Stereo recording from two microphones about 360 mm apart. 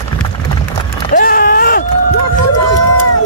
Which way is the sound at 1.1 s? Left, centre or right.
Left.